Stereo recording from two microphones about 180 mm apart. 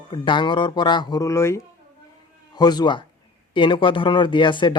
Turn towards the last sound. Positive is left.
turn(degrees=25)  # may be behind; listen again after turning